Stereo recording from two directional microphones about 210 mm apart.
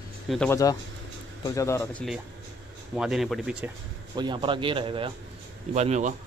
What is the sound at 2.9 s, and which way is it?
Speech, 5° right (ahead or behind).